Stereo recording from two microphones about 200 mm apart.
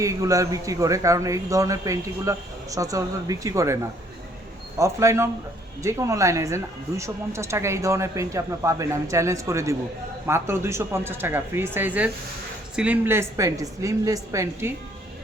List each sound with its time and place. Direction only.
0.0 s speech: 15° right (ahead or behind)
4.8 s speech: 15° right (ahead or behind)